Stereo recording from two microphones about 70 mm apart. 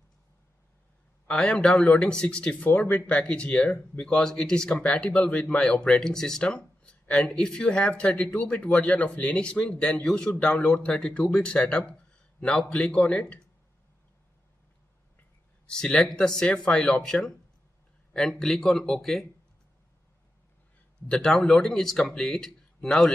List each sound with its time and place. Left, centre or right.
1.2 s speech: centre
4.0 s speech: centre
15.6 s speech: centre
18.4 s speech: centre
21.1 s speech: centre